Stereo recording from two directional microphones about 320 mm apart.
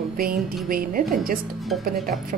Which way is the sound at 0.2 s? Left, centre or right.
Right.